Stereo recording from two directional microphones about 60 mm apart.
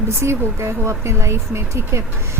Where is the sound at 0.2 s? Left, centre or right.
Right.